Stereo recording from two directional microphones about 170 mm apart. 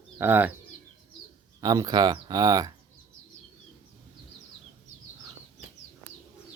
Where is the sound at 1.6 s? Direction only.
20° right (ahead or behind).